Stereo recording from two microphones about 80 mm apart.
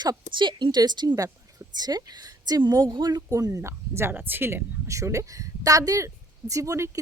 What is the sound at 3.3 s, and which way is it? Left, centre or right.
Speech, right.